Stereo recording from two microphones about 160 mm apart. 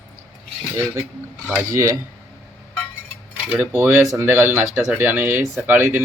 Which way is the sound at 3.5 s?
10° right (ahead or behind).